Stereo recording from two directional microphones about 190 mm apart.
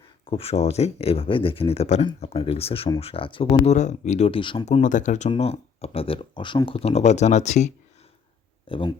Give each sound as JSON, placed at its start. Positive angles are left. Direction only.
{"t": 0.3, "sound": "speech", "side_deg": 30}